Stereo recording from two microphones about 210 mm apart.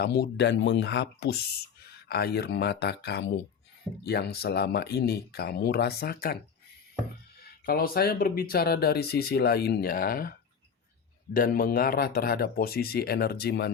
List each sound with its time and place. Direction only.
0.0 s speech: 50° left (ahead or behind)
7.6 s speech: 45° left (ahead or behind)
11.3 s speech: 45° left (ahead or behind)